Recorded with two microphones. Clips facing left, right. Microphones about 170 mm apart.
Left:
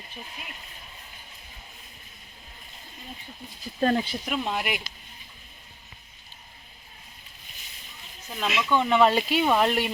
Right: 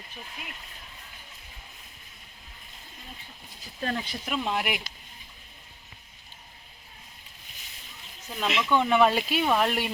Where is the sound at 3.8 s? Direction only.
35° left (ahead or behind).